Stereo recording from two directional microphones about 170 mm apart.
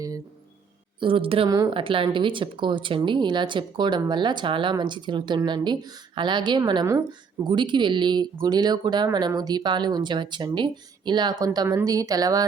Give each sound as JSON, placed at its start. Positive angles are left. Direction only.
{"t": 0.9, "sound": "a woman's voice", "side_deg": -30}
{"t": 1.5, "sound": "speech", "side_deg": -20}
{"t": 1.7, "sound": "a woman's voice", "side_deg": -30}